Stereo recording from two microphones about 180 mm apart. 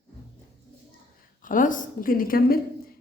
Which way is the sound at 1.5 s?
45° left (ahead or behind).